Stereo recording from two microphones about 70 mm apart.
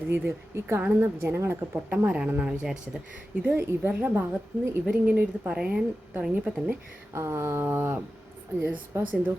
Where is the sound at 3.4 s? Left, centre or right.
Right; by 6.7 s centre.